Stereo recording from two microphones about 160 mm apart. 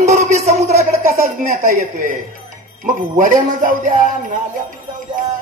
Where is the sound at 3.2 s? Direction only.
55° right (ahead or behind).